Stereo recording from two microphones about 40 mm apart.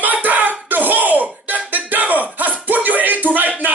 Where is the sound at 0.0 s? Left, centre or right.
Right.